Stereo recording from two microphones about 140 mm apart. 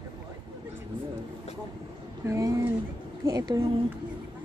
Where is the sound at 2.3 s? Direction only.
20° right (ahead or behind).